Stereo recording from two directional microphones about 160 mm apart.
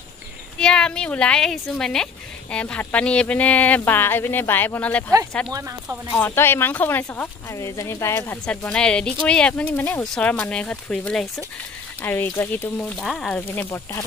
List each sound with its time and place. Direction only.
0.6 s speech: 5° left (ahead or behind)
5.5 s speech: 20° right (ahead or behind)
6.1 s speech: 15° left (ahead or behind)
13.0 s speech: centre (ahead or behind)